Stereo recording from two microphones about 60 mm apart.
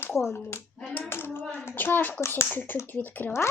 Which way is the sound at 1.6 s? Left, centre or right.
Left.